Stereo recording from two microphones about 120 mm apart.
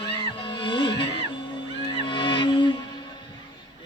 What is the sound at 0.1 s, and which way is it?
Music, 45° left (ahead or behind).